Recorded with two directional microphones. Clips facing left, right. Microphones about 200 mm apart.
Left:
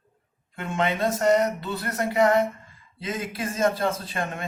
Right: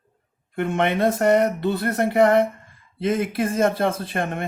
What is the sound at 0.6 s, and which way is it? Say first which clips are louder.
Speech: right 5 dB; 60° right (ahead or behind).